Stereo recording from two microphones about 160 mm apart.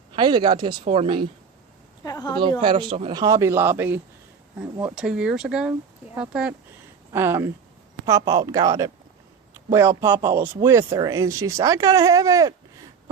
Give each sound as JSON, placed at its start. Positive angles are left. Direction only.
{"t": 0.1, "sound": "speech", "side_deg": -30}
{"t": 2.0, "sound": "speech", "side_deg": 25}
{"t": 2.6, "sound": "speech", "side_deg": -35}